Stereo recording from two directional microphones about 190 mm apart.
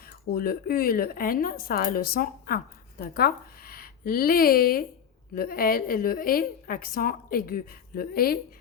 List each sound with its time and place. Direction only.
0.0 s a woman's voice: 50° left (ahead or behind)